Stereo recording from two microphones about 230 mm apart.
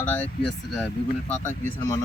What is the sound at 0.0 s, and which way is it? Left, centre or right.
Speech, centre.